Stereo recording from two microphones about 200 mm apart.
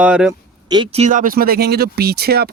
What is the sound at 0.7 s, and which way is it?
Speech, 25° right (ahead or behind).